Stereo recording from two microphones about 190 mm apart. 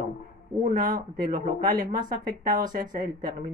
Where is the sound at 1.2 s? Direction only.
50° right (ahead or behind).